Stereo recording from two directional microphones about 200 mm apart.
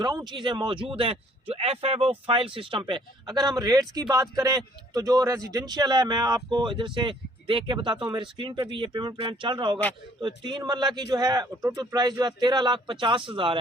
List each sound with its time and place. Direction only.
0.0 s a man's voice: 20° right (ahead or behind)